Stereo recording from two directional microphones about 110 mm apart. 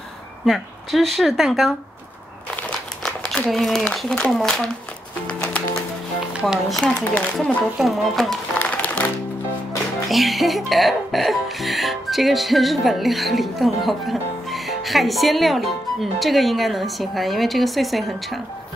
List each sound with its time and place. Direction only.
0.5 s speech: centre (ahead or behind)
2.5 s crumpling: 5° left (ahead or behind)
3.8 s speech: 10° left (ahead or behind)
5.2 s music: 10° left (ahead or behind)
6.4 s speech: centre (ahead or behind)
6.8 s a woman's voice: 15° left (ahead or behind)
7.3 s speech: centre (ahead or behind)
8.5 s music: 15° left (ahead or behind)
10.0 s speech: centre (ahead or behind)